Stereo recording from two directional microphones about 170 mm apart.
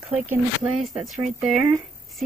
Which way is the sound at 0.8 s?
Centre (ahead or behind).